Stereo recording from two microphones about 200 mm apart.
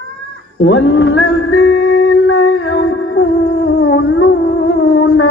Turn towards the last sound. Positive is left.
turn(degrees=60)  # may be behind; listen again after turning